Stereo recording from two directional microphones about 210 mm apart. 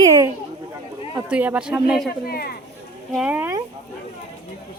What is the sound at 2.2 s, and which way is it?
Speech, 45° left (ahead or behind).